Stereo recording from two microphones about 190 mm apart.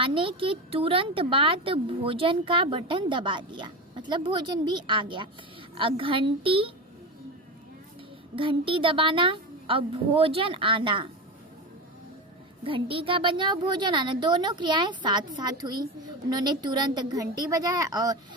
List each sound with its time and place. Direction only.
0.0 s speech: 30° right (ahead or behind)
8.4 s speech: 25° right (ahead or behind)
12.6 s speech: 30° right (ahead or behind)